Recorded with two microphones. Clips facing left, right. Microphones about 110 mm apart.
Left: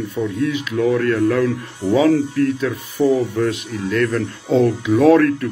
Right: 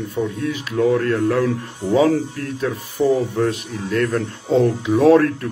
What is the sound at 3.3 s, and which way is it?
Speech, 40° right (ahead or behind).